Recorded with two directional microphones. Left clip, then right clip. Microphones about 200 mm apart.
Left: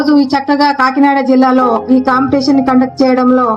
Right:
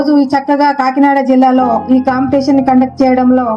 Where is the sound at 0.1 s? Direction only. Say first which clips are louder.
Left 1 dB; 40° right (ahead or behind).